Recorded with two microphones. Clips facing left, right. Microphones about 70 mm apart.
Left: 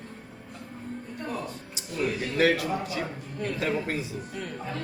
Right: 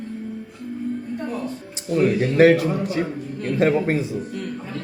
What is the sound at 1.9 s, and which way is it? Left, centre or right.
A man's voice, right.